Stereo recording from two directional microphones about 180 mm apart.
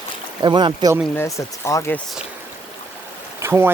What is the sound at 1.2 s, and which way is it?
Speech, 15° left (ahead or behind).